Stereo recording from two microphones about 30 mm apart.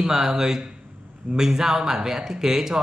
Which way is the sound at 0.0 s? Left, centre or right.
Centre.